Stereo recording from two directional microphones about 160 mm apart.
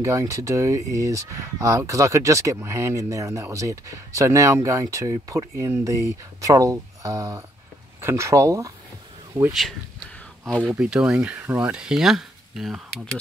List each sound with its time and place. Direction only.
0.0 s speech: 20° right (ahead or behind)
9.5 s speech: centre (ahead or behind)
10.7 s speech: 5° right (ahead or behind)